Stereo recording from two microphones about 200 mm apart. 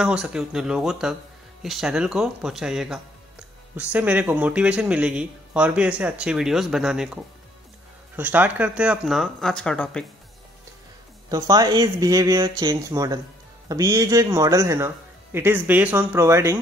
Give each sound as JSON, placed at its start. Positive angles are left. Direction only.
{"t": 0.0, "sound": "a man's voice", "side_deg": -5}
{"t": 8.2, "sound": "a man's voice", "side_deg": -10}
{"t": 11.2, "sound": "speech", "side_deg": -20}